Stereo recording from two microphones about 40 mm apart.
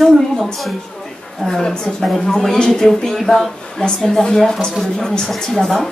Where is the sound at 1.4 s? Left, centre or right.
Centre.